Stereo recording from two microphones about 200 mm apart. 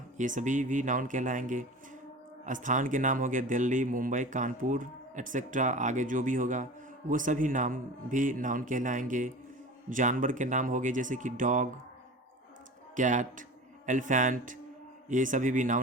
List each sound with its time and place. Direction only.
0.2 s speech: 40° right (ahead or behind)
13.0 s speech: 40° right (ahead or behind)